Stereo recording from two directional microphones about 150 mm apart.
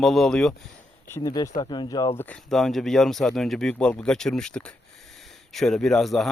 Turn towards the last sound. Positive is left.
turn(degrees=0)  # may be behind; listen again after turning